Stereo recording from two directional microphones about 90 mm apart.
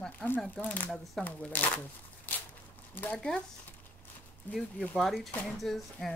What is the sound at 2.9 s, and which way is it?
Speech, 15° left (ahead or behind).